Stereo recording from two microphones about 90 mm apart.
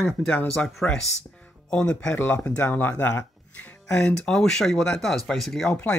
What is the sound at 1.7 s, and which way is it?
Speech, 10° left (ahead or behind).